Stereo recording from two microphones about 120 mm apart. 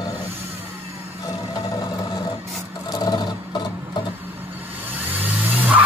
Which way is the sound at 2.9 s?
35° left (ahead or behind).